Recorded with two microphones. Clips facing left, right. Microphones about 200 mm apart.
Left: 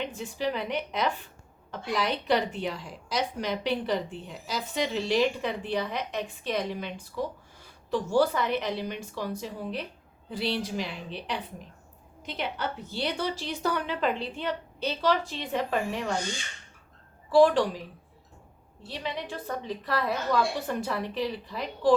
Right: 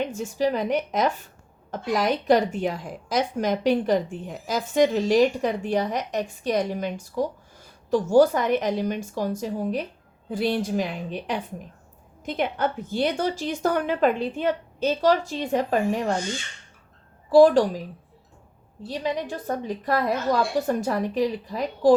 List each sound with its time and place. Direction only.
0.0 s a woman's voice: 45° right (ahead or behind)
17.3 s a woman's voice: 40° right (ahead or behind)
18.9 s a woman's voice: 45° right (ahead or behind)